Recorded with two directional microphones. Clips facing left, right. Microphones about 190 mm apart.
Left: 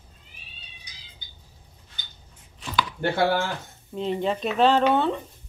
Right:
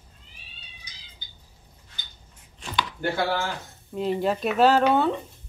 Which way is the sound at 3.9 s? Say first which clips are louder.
Right 1 dB; 5° right (ahead or behind).